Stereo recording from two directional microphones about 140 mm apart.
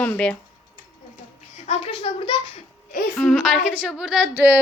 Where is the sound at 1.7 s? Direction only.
55° left (ahead or behind).